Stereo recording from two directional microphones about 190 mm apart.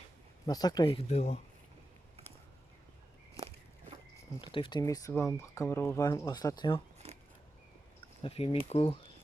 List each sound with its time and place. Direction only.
0.4 s speech: 20° left (ahead or behind)
4.4 s speech: 25° left (ahead or behind)
7.0 s a sound: 30° right (ahead or behind)
8.2 s speech: 30° left (ahead or behind)